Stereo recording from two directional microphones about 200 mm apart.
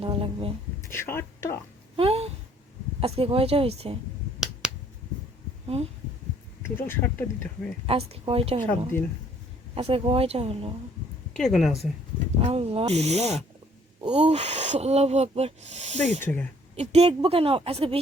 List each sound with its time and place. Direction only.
0.0 s a woman's voice: 25° right (ahead or behind)
0.8 s speech: 10° left (ahead or behind)
2.0 s a sound: 30° right (ahead or behind)
3.0 s a woman's voice: 30° right (ahead or behind)
4.6 s finger snapping: 5° right (ahead or behind)
5.6 s speech: 30° right (ahead or behind)
6.6 s speech: 10° left (ahead or behind)
7.9 s a woman's voice: 30° right (ahead or behind)
11.3 s speech: centre (ahead or behind)
12.4 s a woman's voice: 30° right (ahead or behind)